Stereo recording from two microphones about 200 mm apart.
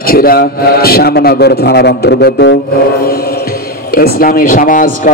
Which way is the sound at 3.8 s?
50° left (ahead or behind).